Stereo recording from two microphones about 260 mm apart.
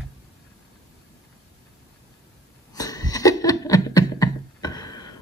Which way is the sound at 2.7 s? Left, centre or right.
Centre.